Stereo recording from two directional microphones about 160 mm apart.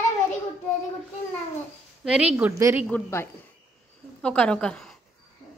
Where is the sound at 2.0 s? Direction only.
5° right (ahead or behind).